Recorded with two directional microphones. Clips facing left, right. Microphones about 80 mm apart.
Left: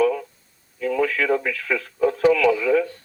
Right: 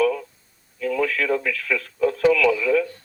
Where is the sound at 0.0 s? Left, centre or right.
Centre.